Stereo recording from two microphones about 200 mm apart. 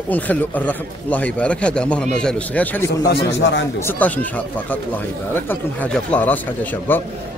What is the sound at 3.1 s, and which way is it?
Speech, 65° left (ahead or behind).